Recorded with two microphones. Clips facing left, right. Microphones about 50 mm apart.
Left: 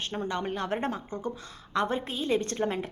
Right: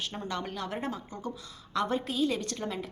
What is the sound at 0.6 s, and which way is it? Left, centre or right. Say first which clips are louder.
A woman's voice: left 4 dB; left.